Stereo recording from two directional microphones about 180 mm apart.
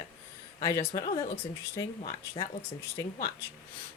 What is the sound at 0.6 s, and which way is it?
Speech, 20° left (ahead or behind).